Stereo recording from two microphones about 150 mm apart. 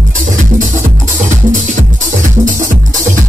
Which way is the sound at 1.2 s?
55° right (ahead or behind).